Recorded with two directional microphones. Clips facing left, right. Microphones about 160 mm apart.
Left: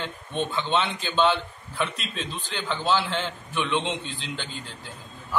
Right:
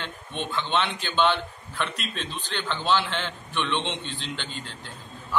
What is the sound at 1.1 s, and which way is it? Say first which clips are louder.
A man's voice: left 1 dB; 5° left (ahead or behind).